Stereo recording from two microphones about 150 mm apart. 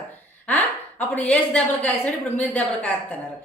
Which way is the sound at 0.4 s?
10° left (ahead or behind).